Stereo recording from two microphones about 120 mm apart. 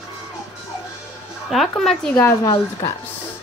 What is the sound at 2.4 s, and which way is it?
Speech, 30° left (ahead or behind).